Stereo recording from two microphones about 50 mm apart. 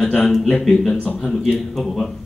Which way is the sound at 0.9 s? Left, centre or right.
Left.